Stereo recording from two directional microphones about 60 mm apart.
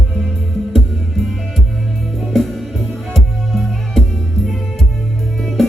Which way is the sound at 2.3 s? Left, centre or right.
Centre.